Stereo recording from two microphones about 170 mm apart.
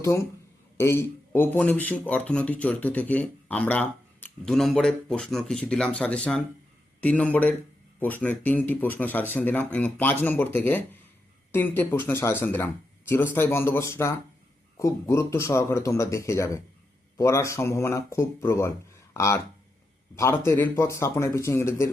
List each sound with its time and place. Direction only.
0.8 s speech: 15° left (ahead or behind)